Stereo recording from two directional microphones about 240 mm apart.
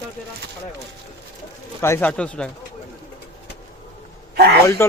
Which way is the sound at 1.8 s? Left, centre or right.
Centre.